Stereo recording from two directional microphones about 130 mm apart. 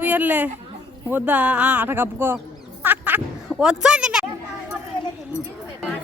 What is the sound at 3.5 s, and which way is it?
Speech, 5° right (ahead or behind).